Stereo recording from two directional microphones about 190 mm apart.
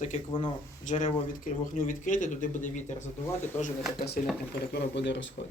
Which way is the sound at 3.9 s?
55° left (ahead or behind).